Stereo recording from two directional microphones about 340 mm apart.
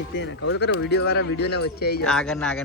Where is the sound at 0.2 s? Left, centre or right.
Left.